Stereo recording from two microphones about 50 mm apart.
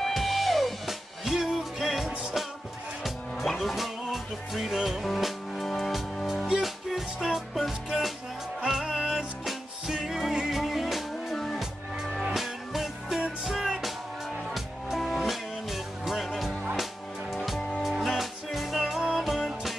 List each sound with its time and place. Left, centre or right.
0.0 s music: centre
11.3 s music: centre
12.4 s music: centre
17.6 s music: centre
17.8 s music: centre